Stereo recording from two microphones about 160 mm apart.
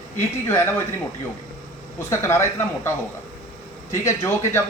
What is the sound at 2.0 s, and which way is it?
Speech, 15° left (ahead or behind).